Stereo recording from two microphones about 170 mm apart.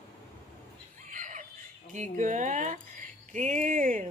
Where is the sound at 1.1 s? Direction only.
50° right (ahead or behind).